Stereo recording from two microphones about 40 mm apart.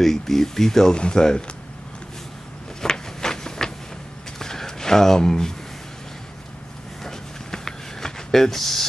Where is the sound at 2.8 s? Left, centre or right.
Centre.